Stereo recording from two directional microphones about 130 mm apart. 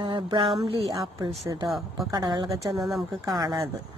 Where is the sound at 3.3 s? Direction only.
30° right (ahead or behind).